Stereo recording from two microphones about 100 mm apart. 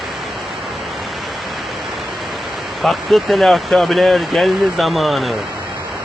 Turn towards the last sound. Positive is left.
turn(degrees=0)  # may be behind; listen again after turning